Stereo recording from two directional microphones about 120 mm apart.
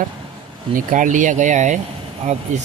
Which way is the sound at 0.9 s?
90° right.